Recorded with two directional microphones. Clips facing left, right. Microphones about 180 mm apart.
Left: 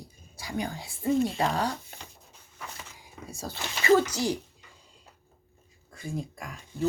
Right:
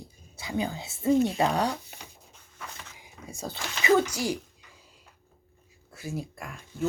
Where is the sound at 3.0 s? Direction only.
20° right (ahead or behind).